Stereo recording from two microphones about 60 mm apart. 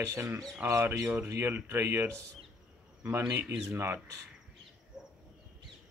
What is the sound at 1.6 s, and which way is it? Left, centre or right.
Speech, right.